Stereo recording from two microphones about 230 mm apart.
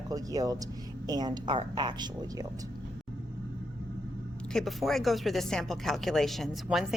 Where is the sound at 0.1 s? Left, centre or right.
Centre.